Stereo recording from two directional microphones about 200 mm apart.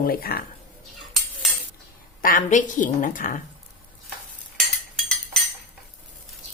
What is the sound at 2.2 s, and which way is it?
A woman's voice, 45° left (ahead or behind).